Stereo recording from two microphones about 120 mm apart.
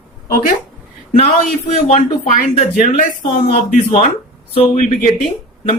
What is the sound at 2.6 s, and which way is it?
A man's voice, 90° left.